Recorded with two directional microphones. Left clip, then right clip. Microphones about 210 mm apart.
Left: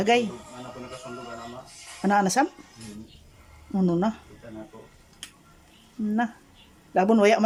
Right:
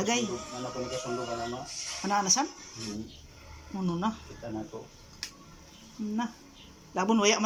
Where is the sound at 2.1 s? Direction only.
25° left (ahead or behind).